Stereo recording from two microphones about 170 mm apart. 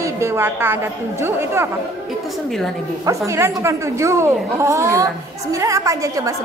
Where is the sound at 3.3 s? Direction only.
15° right (ahead or behind).